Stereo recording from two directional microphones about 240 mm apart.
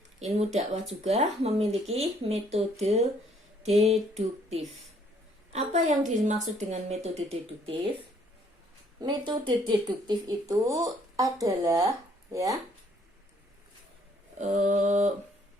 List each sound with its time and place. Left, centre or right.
0.2 s a woman's voice: right
4.1 s a woman's voice: right
9.0 s speech: centre
14.3 s a woman's voice: right